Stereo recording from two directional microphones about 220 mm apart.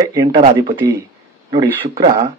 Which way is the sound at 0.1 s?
15° right (ahead or behind).